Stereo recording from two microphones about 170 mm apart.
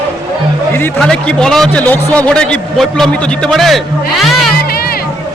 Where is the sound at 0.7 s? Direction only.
10° left (ahead or behind).